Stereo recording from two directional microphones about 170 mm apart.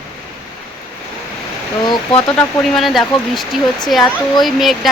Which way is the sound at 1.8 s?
25° left (ahead or behind).